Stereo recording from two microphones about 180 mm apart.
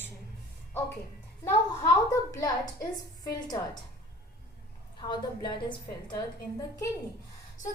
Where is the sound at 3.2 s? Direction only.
20° left (ahead or behind).